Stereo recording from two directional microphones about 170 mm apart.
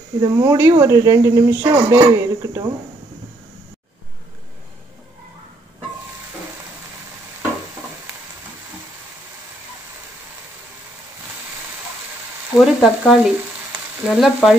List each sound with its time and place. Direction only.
0.2 s speech: 20° right (ahead or behind)
12.5 s frying: centre (ahead or behind)